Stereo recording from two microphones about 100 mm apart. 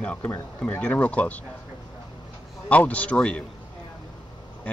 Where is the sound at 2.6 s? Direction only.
15° left (ahead or behind).